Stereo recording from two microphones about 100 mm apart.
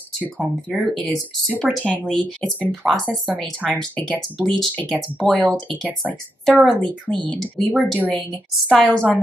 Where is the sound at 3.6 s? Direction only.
15° left (ahead or behind).